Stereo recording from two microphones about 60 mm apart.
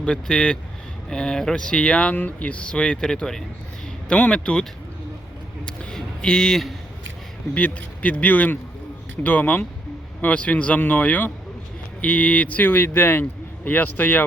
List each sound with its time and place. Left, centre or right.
0.0 s speech: centre
5.6 s a sound: centre
7.5 s speech: left